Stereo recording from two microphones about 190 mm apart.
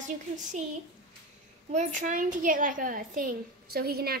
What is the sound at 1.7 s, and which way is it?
A woman's voice, 40° right (ahead or behind).